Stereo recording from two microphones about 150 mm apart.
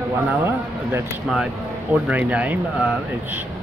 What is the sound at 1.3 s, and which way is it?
Speech, 5° right (ahead or behind).